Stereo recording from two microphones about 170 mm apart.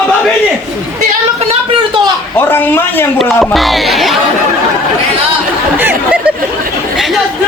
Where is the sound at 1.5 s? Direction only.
30° right (ahead or behind).